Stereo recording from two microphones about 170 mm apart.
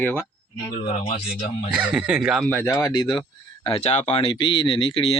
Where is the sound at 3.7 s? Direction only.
40° left (ahead or behind).